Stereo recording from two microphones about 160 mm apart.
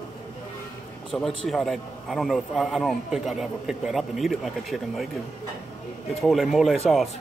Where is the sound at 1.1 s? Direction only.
Centre (ahead or behind).